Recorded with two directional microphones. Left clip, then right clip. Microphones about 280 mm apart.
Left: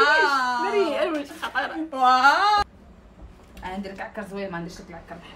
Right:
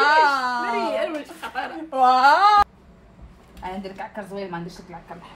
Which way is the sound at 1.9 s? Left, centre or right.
Centre.